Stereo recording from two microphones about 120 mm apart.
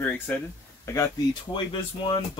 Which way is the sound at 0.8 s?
25° left (ahead or behind).